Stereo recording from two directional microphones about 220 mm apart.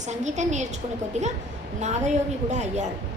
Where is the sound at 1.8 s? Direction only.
30° right (ahead or behind).